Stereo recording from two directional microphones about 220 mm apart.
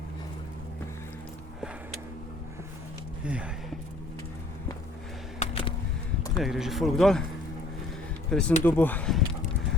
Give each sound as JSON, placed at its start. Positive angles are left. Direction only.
{"t": 3.2, "sound": "speech", "side_deg": -5}
{"t": 5.4, "sound": "a sound", "side_deg": 25}
{"t": 6.3, "sound": "speech", "side_deg": 0}
{"t": 8.3, "sound": "speech", "side_deg": 5}